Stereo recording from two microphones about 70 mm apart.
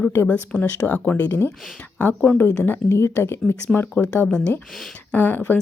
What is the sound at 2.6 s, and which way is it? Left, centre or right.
Speech, left.